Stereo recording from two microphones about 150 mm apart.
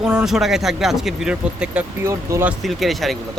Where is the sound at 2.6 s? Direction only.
Centre (ahead or behind).